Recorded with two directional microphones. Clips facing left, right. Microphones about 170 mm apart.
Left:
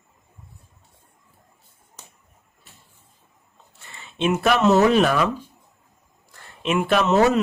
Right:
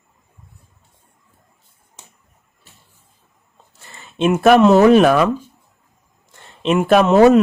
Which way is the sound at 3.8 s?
45° right (ahead or behind).